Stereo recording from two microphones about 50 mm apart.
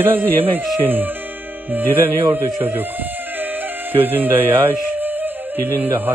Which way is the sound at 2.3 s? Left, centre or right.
Right.